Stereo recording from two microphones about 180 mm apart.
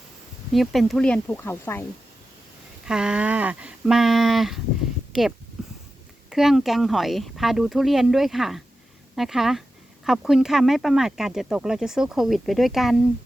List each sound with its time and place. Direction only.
0.5 s speech: centre (ahead or behind)
2.8 s speech: 5° right (ahead or behind)
5.6 s a sound: 5° right (ahead or behind)
6.3 s speech: centre (ahead or behind)